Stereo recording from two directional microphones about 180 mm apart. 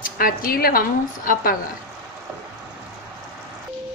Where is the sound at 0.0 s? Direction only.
50° left (ahead or behind).